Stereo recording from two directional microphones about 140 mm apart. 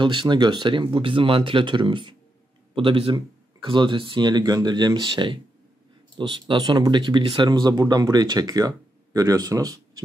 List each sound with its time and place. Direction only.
0.0 s speech: 35° right (ahead or behind)